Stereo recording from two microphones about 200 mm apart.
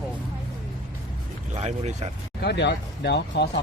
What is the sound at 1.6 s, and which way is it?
Speech, 35° right (ahead or behind).